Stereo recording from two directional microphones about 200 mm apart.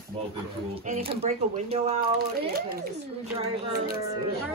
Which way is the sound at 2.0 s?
50° right (ahead or behind).